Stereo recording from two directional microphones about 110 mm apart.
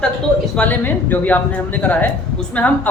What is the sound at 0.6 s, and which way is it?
Speech, 15° left (ahead or behind).